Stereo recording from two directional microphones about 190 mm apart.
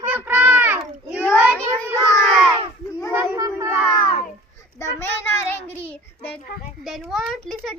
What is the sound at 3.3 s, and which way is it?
Crowd, 15° right (ahead or behind).